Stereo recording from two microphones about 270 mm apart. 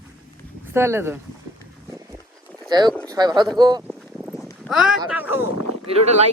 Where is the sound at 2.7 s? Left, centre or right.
Centre.